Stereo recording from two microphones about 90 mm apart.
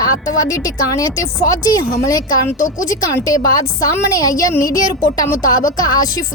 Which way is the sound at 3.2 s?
45° left (ahead or behind).